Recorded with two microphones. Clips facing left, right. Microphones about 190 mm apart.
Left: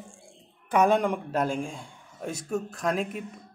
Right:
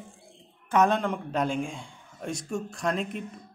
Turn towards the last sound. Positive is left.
turn(degrees=5)  # may be behind; listen again after turning